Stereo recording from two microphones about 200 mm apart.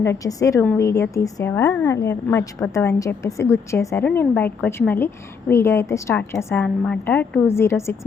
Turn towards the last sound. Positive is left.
turn(degrees=15)  # may be behind; listen again after turning